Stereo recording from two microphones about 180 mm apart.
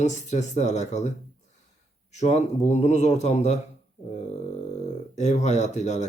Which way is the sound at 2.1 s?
40° left (ahead or behind).